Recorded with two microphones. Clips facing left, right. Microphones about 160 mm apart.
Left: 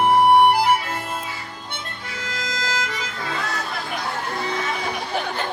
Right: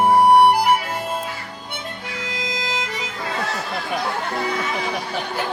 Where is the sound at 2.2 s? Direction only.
15° right (ahead or behind).